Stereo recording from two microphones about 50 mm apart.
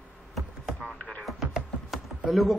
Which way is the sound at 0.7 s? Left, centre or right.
Centre.